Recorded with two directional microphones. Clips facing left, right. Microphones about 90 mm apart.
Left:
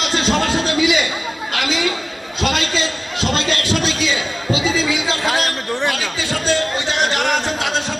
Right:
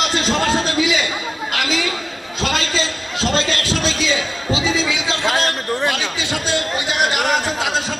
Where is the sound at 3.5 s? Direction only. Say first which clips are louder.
Left 1 dB; 30° right (ahead or behind).